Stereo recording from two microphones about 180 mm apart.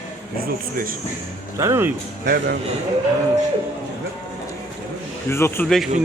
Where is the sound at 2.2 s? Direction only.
60° right (ahead or behind).